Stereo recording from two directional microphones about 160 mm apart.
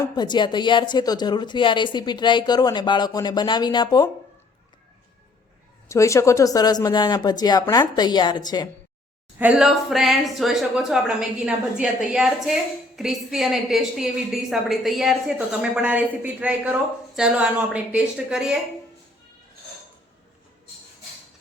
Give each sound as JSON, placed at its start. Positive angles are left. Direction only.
{"t": 0.2, "sound": "a woman's voice", "side_deg": 30}
{"t": 5.9, "sound": "a woman's voice", "side_deg": 20}
{"t": 9.4, "sound": "a woman's voice", "side_deg": -5}